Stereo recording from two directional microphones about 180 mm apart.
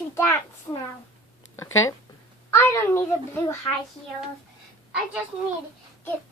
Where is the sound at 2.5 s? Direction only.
15° left (ahead or behind).